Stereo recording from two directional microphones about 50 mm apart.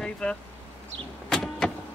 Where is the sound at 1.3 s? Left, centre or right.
Centre.